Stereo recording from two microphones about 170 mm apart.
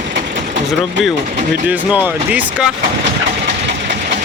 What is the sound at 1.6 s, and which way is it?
Speech, 10° right (ahead or behind).